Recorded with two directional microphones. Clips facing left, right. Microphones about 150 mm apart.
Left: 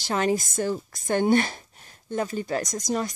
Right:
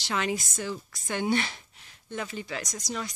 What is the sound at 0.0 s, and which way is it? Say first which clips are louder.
Speech: left 6 dB; 45° left (ahead or behind).